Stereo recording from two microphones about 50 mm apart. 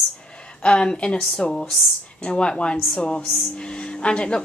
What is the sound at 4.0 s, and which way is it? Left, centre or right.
Speech, left.